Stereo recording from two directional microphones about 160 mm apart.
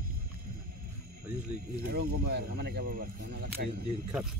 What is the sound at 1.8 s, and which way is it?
Speech, 75° right (ahead or behind).